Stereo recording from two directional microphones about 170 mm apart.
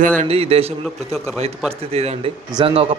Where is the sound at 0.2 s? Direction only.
35° right (ahead or behind).